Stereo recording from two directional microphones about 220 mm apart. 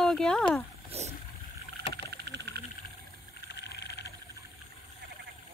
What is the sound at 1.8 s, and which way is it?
Vehicle, 50° right (ahead or behind).